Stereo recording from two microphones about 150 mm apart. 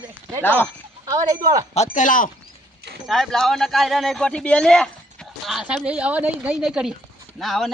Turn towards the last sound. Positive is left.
turn(degrees=0)  # may be behind; listen again after turning